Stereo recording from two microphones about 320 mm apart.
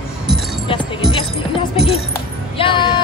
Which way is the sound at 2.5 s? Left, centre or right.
Centre.